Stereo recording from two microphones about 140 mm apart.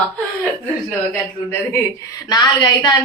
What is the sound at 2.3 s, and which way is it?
Speech, 30° left (ahead or behind).